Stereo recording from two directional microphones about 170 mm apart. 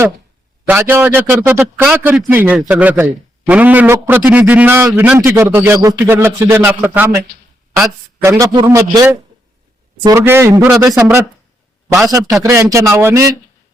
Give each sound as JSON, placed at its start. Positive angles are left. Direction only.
{"t": 0.7, "sound": "a man's voice", "side_deg": -15}
{"t": 8.2, "sound": "a man's voice", "side_deg": -15}
{"t": 12.4, "sound": "a man's voice", "side_deg": -15}